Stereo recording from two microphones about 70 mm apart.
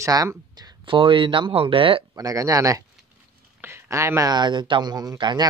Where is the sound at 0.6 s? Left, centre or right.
Right.